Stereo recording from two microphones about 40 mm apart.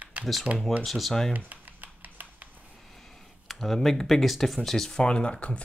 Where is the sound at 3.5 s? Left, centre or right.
Centre.